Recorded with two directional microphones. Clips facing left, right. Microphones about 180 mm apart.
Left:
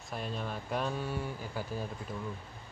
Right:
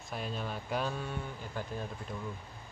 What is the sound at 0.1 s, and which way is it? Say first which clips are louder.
Speech: even; centre (ahead or behind).